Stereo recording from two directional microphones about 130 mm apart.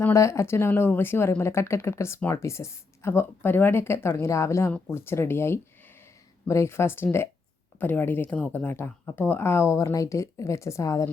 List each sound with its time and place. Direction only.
0.0 s speech: 20° left (ahead or behind)